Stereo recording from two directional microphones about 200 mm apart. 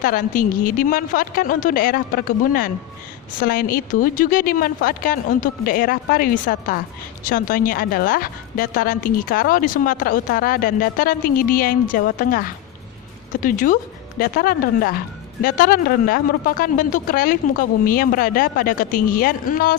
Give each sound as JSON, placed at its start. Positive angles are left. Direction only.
{"t": 0.0, "sound": "a woman's voice", "side_deg": 45}